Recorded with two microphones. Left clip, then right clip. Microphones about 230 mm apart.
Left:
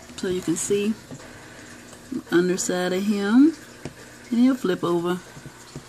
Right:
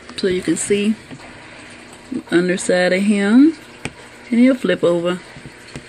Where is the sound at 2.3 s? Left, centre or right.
Right.